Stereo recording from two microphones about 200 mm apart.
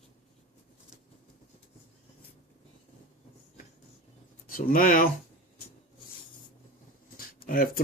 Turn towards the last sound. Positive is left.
turn(degrees=45)  # may be behind; listen again after turning